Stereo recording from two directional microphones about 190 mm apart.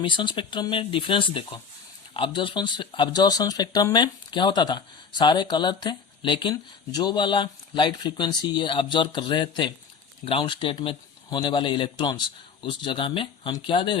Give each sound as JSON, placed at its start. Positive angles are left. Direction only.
{"t": 0.0, "sound": "speech", "side_deg": 25}